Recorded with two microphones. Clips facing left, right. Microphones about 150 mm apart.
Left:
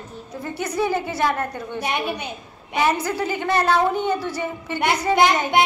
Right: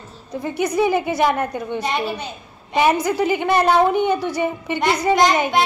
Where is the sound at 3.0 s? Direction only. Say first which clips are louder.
Right 5 dB; 15° right (ahead or behind).